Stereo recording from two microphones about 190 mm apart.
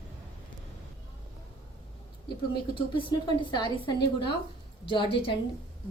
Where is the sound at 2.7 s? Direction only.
25° left (ahead or behind).